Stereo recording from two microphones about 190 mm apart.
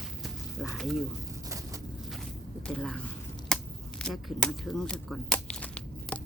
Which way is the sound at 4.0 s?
Centre (ahead or behind).